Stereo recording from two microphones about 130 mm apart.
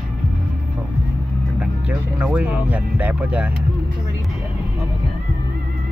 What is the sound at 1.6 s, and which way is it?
Music, 10° right (ahead or behind).